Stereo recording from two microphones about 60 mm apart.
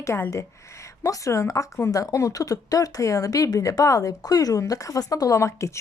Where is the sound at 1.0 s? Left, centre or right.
Left.